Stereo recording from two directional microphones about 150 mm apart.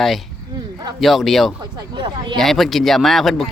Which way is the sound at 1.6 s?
30° right (ahead or behind).